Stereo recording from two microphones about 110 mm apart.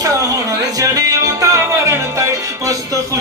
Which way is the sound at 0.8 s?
30° right (ahead or behind).